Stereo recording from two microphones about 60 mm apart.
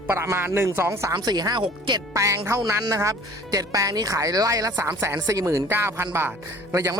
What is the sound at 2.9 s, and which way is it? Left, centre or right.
Speech, right.